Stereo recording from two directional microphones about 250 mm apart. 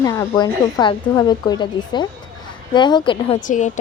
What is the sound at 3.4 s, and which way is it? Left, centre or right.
Speech, left.